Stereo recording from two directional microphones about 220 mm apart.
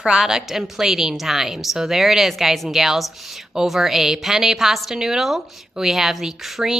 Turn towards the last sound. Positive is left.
turn(degrees=0)  # may be behind; listen again after turning